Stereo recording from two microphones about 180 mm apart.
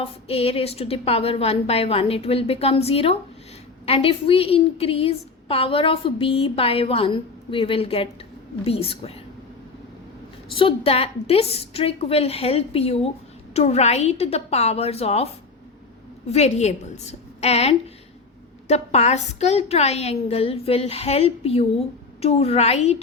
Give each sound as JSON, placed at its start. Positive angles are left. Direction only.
{"t": 0.0, "sound": "a woman's voice", "side_deg": 35}
{"t": 10.5, "sound": "a woman's voice", "side_deg": 30}
{"t": 16.3, "sound": "a woman's voice", "side_deg": 40}